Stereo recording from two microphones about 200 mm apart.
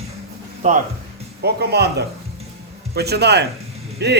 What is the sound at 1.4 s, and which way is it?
A man's voice, 55° right (ahead or behind).